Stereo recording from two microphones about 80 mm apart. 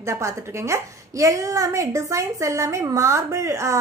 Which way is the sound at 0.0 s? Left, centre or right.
Right.